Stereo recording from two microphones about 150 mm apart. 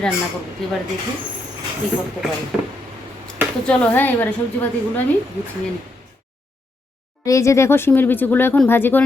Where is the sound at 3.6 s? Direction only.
5° left (ahead or behind).